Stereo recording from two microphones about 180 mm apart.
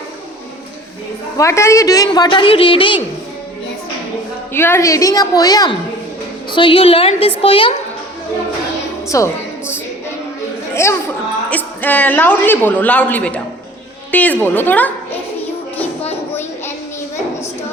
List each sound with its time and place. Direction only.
1.4 s a woman's voice: 15° left (ahead or behind)
4.5 s a woman's voice: 15° left (ahead or behind); by 7.7 s 30° left (ahead or behind)
9.0 s a woman's voice: 15° left (ahead or behind)
16.0 s a sound: 15° left (ahead or behind)